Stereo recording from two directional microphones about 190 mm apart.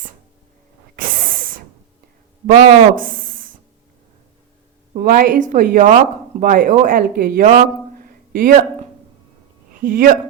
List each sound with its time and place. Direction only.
1.0 s snake: 45° right (ahead or behind)
2.5 s speech: 35° right (ahead or behind)
4.9 s a woman's voice: 50° right (ahead or behind)
9.8 s a woman's voice: 45° right (ahead or behind)